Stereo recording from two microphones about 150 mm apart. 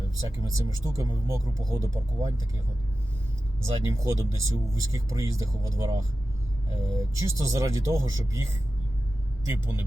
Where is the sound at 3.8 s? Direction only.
20° right (ahead or behind).